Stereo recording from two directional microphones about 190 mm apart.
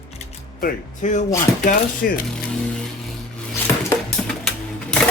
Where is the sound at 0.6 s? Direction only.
40° left (ahead or behind).